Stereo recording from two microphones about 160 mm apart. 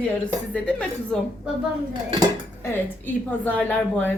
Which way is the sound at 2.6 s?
15° left (ahead or behind).